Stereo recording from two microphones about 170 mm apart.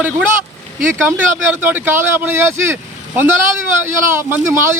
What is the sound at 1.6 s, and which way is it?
A man's voice, 10° right (ahead or behind).